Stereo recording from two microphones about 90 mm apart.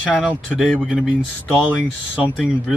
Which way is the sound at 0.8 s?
10° right (ahead or behind).